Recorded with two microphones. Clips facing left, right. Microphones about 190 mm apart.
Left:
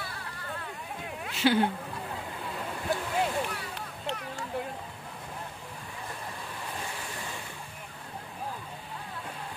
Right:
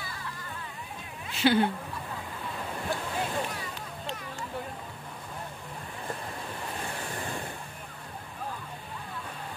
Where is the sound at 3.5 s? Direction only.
65° left (ahead or behind).